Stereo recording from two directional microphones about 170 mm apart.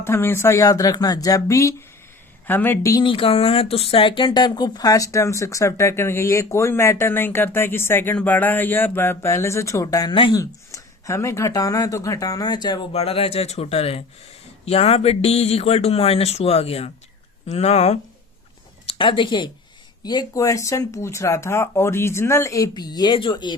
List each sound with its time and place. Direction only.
0.0 s speech: 15° left (ahead or behind)
3.0 s speech: 30° left (ahead or behind)